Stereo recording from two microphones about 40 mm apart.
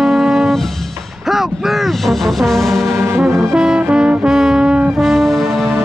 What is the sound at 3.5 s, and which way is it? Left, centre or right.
Music, centre.